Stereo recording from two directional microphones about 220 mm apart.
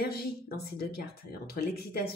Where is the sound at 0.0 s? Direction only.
45° left (ahead or behind).